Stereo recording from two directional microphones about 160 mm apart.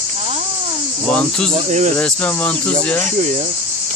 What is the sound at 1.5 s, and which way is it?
Cricket, 50° right (ahead or behind).